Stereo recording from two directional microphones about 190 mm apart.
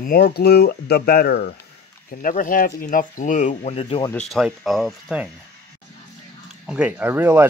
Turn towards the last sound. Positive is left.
turn(degrees=-10)  # may be behind; listen again after turning